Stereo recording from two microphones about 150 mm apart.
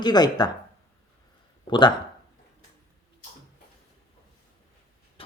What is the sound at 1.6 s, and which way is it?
Speech, 30° left (ahead or behind).